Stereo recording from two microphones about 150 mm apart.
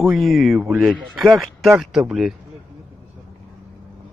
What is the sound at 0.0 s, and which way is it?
Speech, centre (ahead or behind).